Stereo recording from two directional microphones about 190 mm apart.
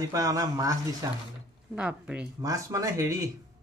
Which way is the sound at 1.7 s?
5° right (ahead or behind).